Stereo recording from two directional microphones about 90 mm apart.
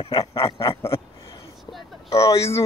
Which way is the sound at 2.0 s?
35° left (ahead or behind).